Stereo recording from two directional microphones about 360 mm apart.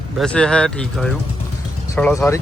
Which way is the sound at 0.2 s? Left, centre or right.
Centre.